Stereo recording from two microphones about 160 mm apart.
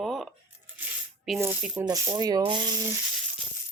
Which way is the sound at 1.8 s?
20° right (ahead or behind).